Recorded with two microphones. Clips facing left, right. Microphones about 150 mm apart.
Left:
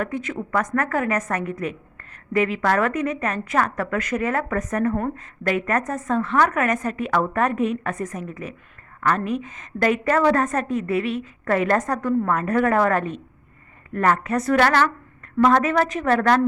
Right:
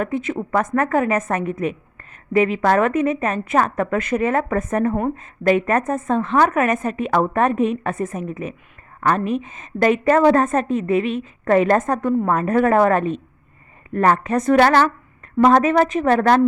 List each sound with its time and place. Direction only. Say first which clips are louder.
0.0 s a woman's voice: right 4 dB; 25° right (ahead or behind)